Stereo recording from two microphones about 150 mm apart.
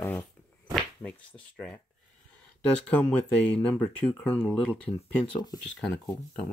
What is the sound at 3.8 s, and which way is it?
Speech, 10° left (ahead or behind).